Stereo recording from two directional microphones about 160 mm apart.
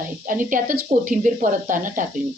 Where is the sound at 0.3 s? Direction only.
55° right (ahead or behind).